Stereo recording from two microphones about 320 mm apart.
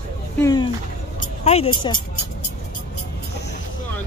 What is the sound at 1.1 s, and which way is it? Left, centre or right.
Vehicle, centre.